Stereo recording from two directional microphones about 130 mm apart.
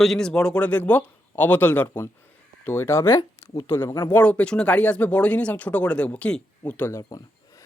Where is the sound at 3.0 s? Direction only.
35° left (ahead or behind).